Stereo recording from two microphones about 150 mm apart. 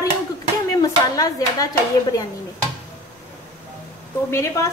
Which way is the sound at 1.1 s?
25° left (ahead or behind).